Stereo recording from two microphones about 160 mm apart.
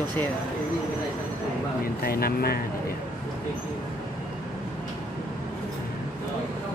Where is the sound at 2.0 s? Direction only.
70° left (ahead or behind).